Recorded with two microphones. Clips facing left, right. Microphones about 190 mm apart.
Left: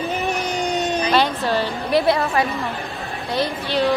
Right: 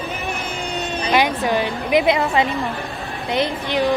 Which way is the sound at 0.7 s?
40° left (ahead or behind).